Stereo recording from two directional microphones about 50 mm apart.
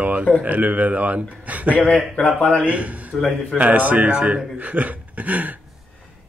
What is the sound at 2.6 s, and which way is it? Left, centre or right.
Speech, right.